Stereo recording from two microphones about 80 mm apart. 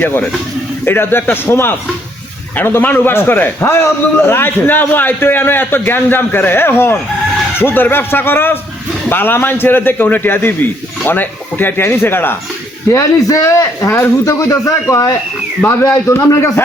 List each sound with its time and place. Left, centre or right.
0.0 s a man's voice: left
12.9 s a man's voice: left
14.3 s a man's voice: left